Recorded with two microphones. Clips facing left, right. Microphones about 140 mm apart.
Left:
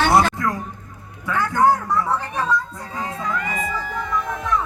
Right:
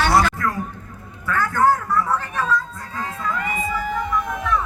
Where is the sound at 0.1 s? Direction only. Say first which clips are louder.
Left 1 dB; 25° left (ahead or behind).